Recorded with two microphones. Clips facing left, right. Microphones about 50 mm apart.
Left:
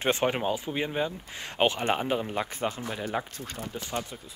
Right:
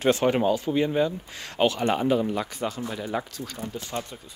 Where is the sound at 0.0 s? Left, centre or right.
Left.